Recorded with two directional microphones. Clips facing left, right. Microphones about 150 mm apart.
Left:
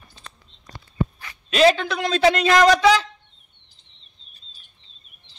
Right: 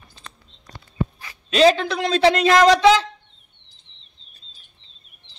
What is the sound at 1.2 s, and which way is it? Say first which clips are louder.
Speech: right 1 dB; 25° right (ahead or behind).